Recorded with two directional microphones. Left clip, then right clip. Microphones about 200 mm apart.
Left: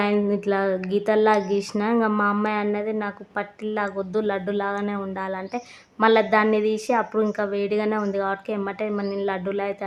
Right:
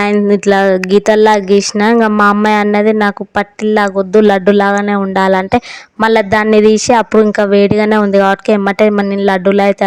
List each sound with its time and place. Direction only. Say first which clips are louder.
0.0 s a woman's voice: right 12 dB; 45° right (ahead or behind)